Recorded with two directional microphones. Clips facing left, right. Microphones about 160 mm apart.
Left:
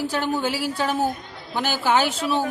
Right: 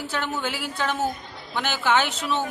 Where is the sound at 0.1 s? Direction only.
35° left (ahead or behind).